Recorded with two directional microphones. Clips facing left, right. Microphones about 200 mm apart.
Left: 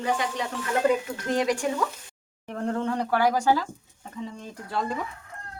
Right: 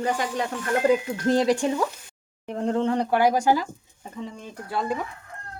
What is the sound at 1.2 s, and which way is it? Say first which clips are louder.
Speech: right 5 dB; 35° right (ahead or behind).